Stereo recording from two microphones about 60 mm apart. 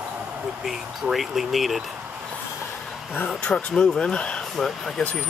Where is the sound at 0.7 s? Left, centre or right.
Centre.